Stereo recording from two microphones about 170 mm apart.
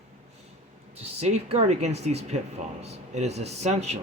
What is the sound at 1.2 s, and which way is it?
Speech, 40° right (ahead or behind).